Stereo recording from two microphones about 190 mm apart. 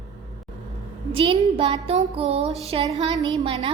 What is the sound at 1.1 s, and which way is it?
Music, 30° right (ahead or behind).